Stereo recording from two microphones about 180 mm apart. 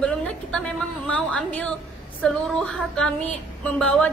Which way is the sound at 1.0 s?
5° left (ahead or behind).